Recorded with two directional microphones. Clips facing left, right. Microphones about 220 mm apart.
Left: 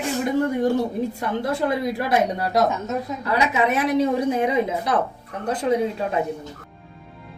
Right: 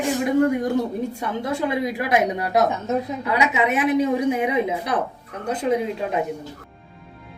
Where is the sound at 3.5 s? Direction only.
15° right (ahead or behind).